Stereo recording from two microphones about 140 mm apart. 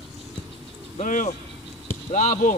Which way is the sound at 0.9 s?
65° left (ahead or behind).